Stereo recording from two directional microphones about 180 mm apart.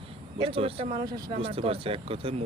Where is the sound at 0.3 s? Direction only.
30° right (ahead or behind).